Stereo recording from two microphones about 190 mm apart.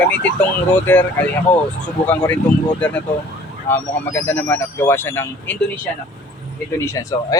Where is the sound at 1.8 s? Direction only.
10° left (ahead or behind).